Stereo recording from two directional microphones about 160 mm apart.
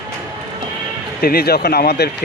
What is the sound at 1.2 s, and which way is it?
Speech, 70° left (ahead or behind).